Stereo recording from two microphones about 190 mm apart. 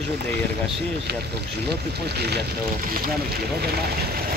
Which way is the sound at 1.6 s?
60° right (ahead or behind).